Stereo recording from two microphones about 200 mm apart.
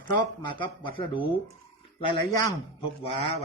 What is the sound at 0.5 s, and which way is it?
Speech, 25° left (ahead or behind).